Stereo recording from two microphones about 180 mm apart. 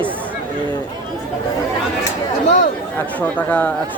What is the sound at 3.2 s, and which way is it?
Speech, 10° left (ahead or behind).